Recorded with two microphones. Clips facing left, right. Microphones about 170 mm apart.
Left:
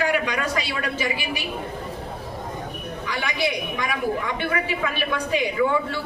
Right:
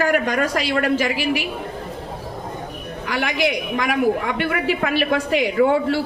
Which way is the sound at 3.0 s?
75° right (ahead or behind).